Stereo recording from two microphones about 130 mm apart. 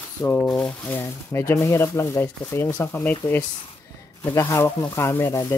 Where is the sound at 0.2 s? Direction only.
15° left (ahead or behind).